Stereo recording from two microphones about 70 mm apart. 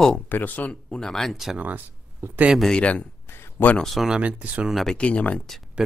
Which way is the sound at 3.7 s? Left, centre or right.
Centre.